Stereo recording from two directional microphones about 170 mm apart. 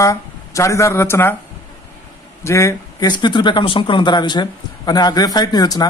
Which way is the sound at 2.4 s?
15° left (ahead or behind).